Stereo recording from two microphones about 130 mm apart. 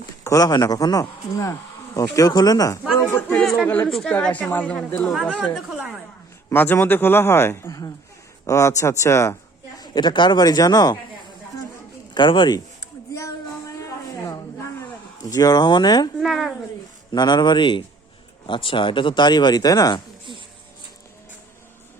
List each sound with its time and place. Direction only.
0.3 s a man's voice: 30° left (ahead or behind)
3.2 s a man's voice: 15° left (ahead or behind)
3.8 s a man's voice: 5° left (ahead or behind)
5.0 s a woman's voice: centre (ahead or behind)
6.5 s a man's voice: 15° left (ahead or behind)
9.8 s speech: 35° left (ahead or behind)
12.1 s speech: 35° left (ahead or behind)
13.1 s music: 25° left (ahead or behind)
15.2 s speech: 30° left (ahead or behind)
16.2 s a woman's voice: centre (ahead or behind)
17.1 s speech: 35° left (ahead or behind)